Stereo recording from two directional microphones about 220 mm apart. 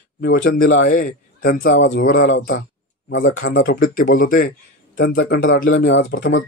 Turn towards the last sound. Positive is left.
turn(degrees=50)  # may be behind; listen again after turning